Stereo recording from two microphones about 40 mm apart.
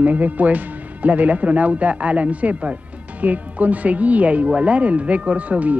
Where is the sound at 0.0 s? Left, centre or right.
Right.